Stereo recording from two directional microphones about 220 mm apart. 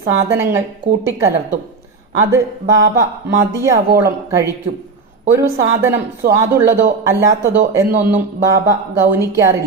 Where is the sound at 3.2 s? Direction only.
10° right (ahead or behind).